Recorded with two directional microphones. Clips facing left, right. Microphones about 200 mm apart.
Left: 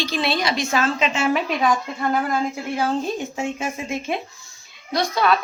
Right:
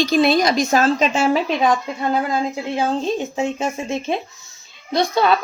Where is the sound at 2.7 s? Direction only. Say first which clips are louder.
Right 3 dB; 25° right (ahead or behind).